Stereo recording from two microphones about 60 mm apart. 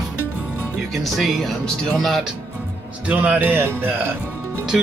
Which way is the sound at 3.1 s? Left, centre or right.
Right.